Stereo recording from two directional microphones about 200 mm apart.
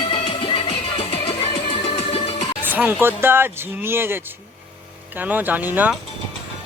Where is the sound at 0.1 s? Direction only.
25° left (ahead or behind).